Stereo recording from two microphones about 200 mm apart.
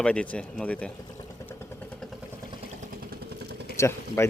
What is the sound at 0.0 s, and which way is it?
Speech, 5° left (ahead or behind).